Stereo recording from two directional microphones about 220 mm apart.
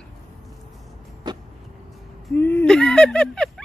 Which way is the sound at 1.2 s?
20° right (ahead or behind).